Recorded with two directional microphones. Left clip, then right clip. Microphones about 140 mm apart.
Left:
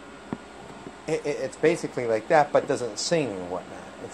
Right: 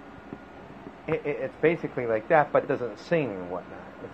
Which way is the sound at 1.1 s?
35° left (ahead or behind).